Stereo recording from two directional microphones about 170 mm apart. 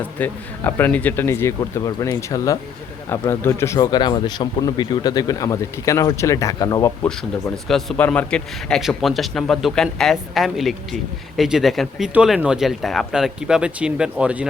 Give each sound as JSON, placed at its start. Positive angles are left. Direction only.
{"t": 0.0, "sound": "speech", "side_deg": 10}
{"t": 7.5, "sound": "speech", "side_deg": 0}